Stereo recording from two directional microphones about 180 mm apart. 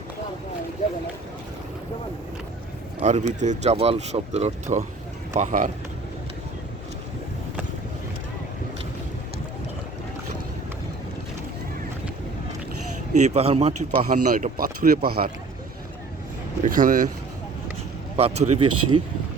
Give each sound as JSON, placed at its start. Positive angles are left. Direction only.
{"t": 3.0, "sound": "speech", "side_deg": -40}
{"t": 13.2, "sound": "speech", "side_deg": -35}
{"t": 16.6, "sound": "speech", "side_deg": -50}
{"t": 18.2, "sound": "speech", "side_deg": -35}